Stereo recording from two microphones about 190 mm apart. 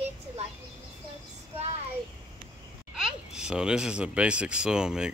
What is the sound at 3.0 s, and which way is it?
Speech, 5° right (ahead or behind).